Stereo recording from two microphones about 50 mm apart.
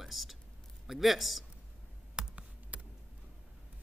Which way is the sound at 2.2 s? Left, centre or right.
Centre.